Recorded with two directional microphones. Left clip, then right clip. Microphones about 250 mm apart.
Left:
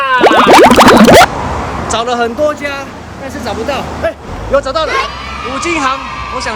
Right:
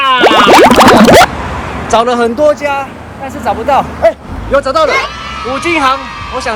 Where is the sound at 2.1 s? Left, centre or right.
Right.